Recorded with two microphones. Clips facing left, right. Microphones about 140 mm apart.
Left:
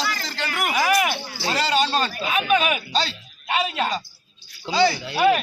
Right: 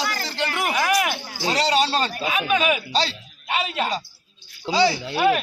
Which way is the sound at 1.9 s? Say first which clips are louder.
Even; 30° right (ahead or behind).